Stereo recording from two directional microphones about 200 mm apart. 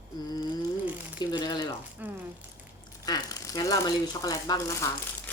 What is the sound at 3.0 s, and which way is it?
Speech, 20° left (ahead or behind).